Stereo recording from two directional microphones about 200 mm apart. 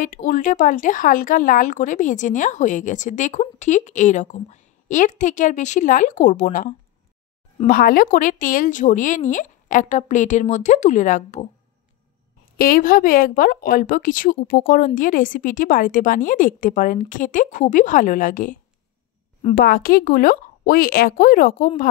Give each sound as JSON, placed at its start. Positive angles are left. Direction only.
{"t": 0.0, "sound": "speech", "side_deg": 40}
{"t": 12.5, "sound": "speech", "side_deg": 45}